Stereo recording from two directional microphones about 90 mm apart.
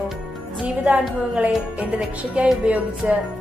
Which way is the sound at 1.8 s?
15° right (ahead or behind).